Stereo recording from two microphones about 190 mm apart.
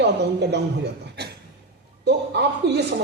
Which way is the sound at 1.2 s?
60° right (ahead or behind).